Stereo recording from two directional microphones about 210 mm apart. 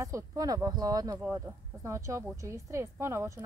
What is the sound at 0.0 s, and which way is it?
A woman's voice, 15° right (ahead or behind).